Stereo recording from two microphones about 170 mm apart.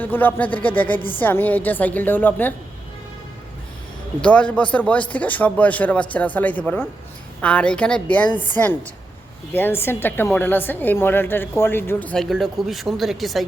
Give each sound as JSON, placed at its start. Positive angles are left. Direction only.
{"t": 0.0, "sound": "a woman's voice", "side_deg": 10}
{"t": 4.2, "sound": "a woman's voice", "side_deg": 5}